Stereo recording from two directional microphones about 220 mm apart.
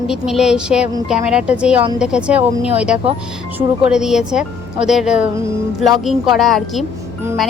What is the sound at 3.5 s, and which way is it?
Speech, 5° right (ahead or behind).